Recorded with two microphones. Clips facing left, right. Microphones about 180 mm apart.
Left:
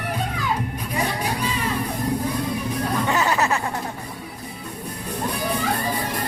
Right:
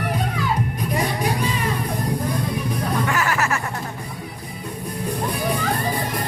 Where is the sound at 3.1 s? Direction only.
20° left (ahead or behind).